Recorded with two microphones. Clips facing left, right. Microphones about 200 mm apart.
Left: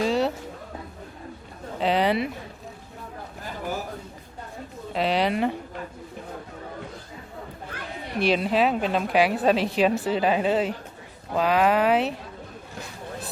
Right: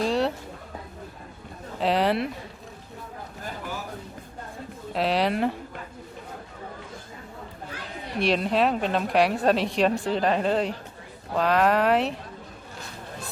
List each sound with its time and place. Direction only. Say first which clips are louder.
0.0 s a sound: left 1 dB; centre (ahead or behind)
1.8 s a woman's voice: left 1 dB; centre (ahead or behind)
4.9 s a woman's voice: even; centre (ahead or behind)
8.2 s a woman's voice: left 1 dB; centre (ahead or behind)